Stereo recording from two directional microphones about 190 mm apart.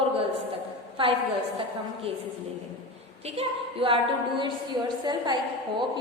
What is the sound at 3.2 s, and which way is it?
A woman's voice, 30° right (ahead or behind).